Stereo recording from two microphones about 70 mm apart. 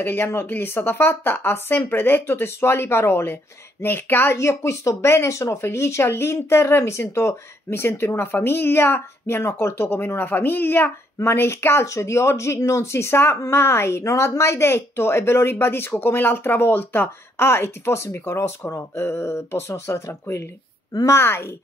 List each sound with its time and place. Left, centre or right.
0.0 s speech: left